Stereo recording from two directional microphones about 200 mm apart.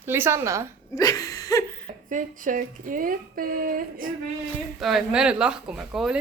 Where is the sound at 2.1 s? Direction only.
40° right (ahead or behind).